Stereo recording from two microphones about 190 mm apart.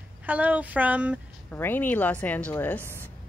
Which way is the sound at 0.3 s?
10° right (ahead or behind).